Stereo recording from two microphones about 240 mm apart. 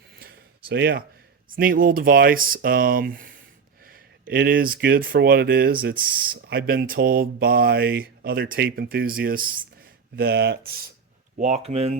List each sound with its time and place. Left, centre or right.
0.2 s a sound: right
1.5 s speech: right
11.3 s speech: right